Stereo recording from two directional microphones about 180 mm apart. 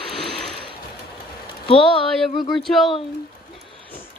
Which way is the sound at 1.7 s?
30° left (ahead or behind).